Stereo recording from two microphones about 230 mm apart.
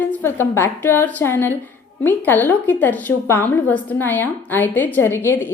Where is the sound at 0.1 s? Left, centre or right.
Centre.